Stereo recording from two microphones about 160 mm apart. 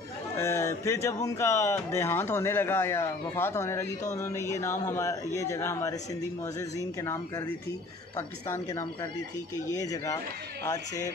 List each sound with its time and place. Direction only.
0.4 s speech: 15° left (ahead or behind)